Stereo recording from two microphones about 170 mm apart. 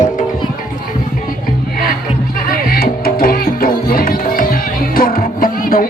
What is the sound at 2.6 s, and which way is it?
Music, 60° left (ahead or behind).